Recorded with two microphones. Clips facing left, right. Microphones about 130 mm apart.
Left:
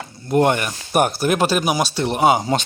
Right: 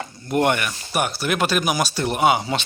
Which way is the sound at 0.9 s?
45° left (ahead or behind).